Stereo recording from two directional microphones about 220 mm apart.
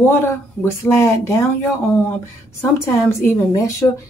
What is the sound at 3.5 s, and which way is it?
Speech, 15° left (ahead or behind).